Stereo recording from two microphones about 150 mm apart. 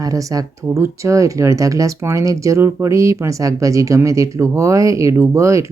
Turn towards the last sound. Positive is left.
turn(degrees=-20)  # may be behind; listen again after turning